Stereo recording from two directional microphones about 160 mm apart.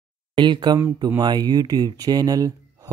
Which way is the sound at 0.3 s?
30° right (ahead or behind).